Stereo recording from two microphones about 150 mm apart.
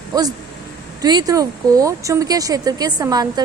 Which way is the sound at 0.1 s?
25° right (ahead or behind).